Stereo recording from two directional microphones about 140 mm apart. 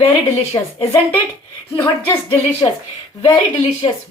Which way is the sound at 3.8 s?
40° left (ahead or behind).